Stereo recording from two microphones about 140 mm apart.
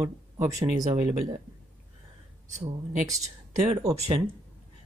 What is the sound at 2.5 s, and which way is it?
Speech, 60° right (ahead or behind).